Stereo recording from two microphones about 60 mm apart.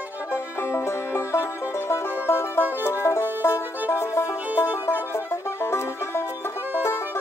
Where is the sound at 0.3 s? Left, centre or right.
Left.